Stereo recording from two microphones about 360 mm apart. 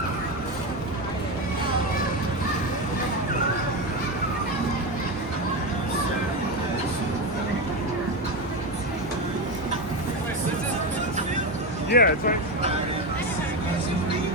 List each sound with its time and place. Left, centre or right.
11.9 s speech: left